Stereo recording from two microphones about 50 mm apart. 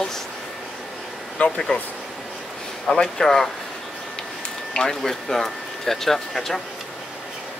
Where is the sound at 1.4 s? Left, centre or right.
Centre.